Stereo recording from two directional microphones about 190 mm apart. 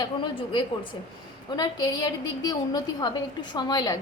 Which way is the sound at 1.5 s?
20° left (ahead or behind).